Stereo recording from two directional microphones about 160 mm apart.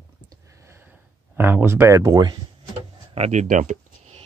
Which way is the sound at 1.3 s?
15° right (ahead or behind).